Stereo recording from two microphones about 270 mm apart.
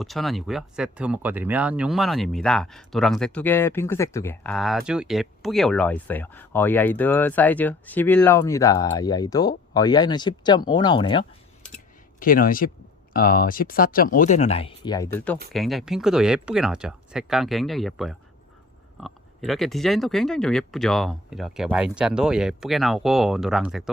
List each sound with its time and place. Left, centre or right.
0.0 s speech: centre
12.2 s speech: left; by 23.9 s centre